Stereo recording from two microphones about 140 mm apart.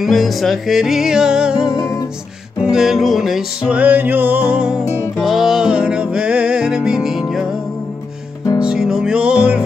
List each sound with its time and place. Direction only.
0.0 s music: centre (ahead or behind)
1.7 s music: 25° left (ahead or behind)
2.6 s music: 5° right (ahead or behind)
8.5 s music: 5° right (ahead or behind)